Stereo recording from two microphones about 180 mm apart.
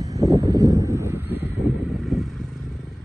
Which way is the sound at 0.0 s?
20° right (ahead or behind).